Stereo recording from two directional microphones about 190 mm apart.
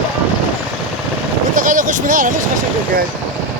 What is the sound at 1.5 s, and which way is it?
Vehicle, 45° right (ahead or behind).